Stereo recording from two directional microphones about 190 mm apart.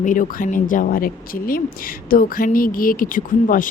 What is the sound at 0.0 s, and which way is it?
Speech, 45° left (ahead or behind).